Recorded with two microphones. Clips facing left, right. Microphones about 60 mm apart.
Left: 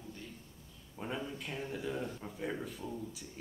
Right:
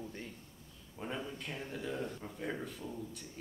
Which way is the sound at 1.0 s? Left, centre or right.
Centre.